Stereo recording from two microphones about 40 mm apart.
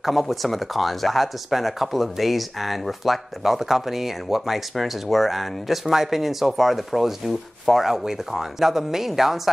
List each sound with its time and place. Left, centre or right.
0.0 s speech: centre